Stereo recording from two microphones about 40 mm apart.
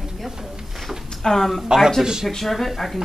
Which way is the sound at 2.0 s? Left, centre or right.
Centre.